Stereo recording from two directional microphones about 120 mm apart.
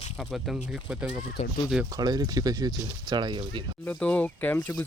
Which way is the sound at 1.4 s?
65° left (ahead or behind).